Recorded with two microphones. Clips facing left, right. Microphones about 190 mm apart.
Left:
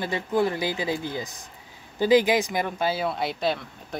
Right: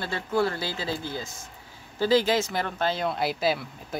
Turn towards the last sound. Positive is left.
turn(degrees=-5)  # may be behind; listen again after turning